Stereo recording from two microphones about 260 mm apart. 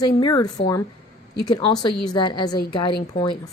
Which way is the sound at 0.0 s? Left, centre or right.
Centre.